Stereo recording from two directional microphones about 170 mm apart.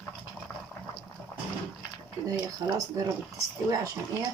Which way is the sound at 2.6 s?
25° right (ahead or behind).